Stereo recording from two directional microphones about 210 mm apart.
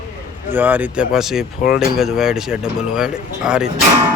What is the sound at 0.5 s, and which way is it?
Speech, 10° right (ahead or behind).